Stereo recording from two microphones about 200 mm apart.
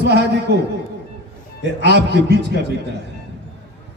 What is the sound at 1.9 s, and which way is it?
Speech, 55° right (ahead or behind).